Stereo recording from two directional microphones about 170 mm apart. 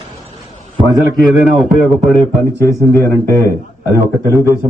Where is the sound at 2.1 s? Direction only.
15° left (ahead or behind).